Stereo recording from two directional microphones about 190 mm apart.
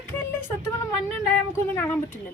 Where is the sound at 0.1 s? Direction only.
10° left (ahead or behind).